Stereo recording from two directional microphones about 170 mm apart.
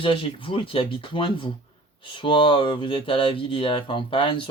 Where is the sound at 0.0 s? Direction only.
30° left (ahead or behind).